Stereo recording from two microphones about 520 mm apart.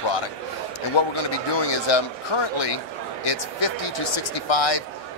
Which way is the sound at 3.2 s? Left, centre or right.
Left.